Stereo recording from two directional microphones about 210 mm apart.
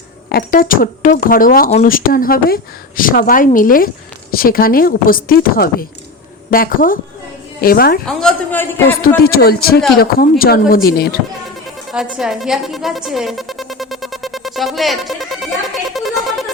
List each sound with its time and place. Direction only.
0.3 s speech: 45° left (ahead or behind)
8.0 s a man's voice: 5° left (ahead or behind)
9.0 s speech: 45° left (ahead or behind)
11.9 s speech: centre (ahead or behind)
15.9 s music: centre (ahead or behind)